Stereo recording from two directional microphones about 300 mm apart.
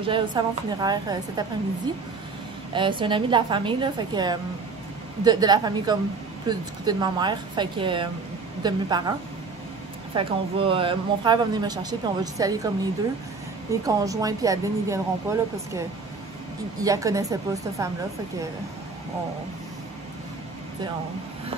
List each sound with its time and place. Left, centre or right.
0.0 s a man's voice: centre
10.1 s a man's voice: centre
13.8 s a man's voice: centre
16.8 s a man's voice: centre